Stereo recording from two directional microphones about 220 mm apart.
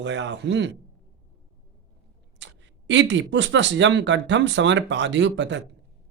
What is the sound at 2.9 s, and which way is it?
Speech, 55° right (ahead or behind).